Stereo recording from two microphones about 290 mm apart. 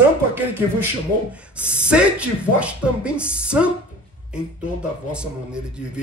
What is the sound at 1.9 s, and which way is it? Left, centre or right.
Speech, centre.